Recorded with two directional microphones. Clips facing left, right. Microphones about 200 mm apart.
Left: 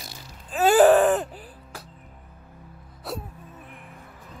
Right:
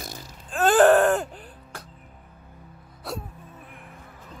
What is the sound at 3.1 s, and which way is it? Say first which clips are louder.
Wail: even; centre (ahead or behind).